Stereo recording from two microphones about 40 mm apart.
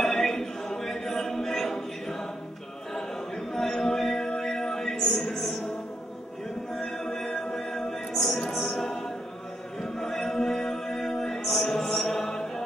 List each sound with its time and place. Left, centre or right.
0.0 s a capella: centre
3.5 s music: centre
4.9 s music: centre
6.7 s music: centre
8.5 s a capella: centre
9.9 s chant: centre
12.3 s music: centre